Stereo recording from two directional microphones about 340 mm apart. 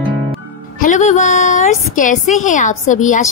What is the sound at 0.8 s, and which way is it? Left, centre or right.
A woman's voice, left.